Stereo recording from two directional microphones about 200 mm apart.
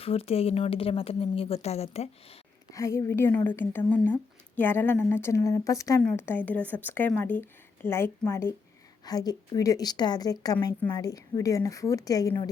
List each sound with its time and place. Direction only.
0.0 s a woman's voice: 30° left (ahead or behind)
2.7 s a woman's voice: 15° left (ahead or behind)